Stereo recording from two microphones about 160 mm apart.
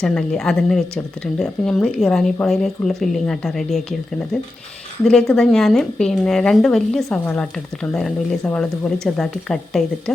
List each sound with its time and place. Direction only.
0.0 s speech: 5° left (ahead or behind)